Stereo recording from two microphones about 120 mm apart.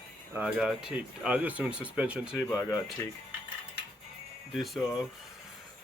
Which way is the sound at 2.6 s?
20° left (ahead or behind).